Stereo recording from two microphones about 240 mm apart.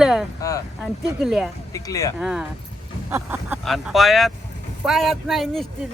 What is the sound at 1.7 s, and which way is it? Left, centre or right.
Speech, centre.